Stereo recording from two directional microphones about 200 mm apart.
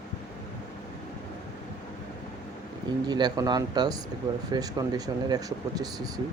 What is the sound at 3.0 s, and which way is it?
Speech, 20° right (ahead or behind).